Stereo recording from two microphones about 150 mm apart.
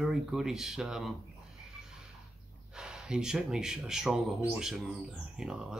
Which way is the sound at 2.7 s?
5° right (ahead or behind).